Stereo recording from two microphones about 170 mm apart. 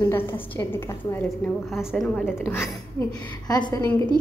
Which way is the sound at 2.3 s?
15° left (ahead or behind).